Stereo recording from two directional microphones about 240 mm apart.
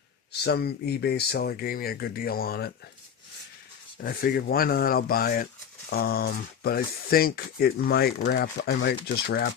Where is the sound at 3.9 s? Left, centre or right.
Left.